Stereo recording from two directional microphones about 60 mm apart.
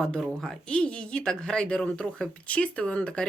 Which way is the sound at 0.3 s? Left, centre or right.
Centre.